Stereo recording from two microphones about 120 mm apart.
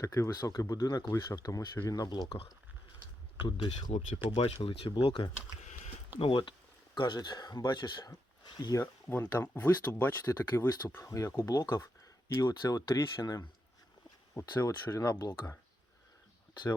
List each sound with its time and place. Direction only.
0.0 s speech: 25° left (ahead or behind)
3.3 s speech: 40° left (ahead or behind)
3.7 s speech: 75° left (ahead or behind)
4.4 s speech: 50° left (ahead or behind); by 8.8 s 30° left (ahead or behind)
8.8 s speech: 20° left (ahead or behind)